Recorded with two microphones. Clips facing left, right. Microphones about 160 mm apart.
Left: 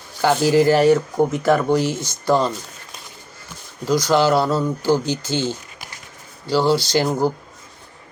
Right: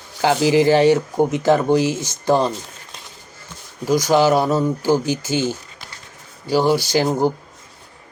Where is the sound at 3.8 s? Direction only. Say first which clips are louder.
Right 1 dB; 15° right (ahead or behind).